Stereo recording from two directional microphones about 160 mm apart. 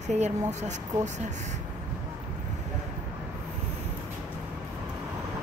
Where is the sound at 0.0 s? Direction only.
45° right (ahead or behind).